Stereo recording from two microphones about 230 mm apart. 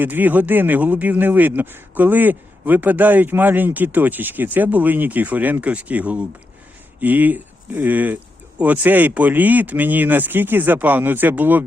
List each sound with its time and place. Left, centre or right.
0.0 s speech: centre